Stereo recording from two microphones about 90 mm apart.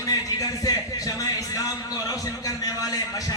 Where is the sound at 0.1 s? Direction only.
45° left (ahead or behind).